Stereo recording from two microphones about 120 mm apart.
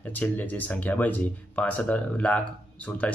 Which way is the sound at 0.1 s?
15° left (ahead or behind).